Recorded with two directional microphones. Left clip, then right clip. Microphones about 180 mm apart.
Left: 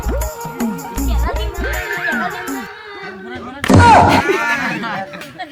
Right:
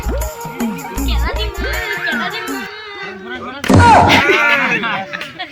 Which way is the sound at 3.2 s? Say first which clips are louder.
Right 3 dB; 60° left (ahead or behind).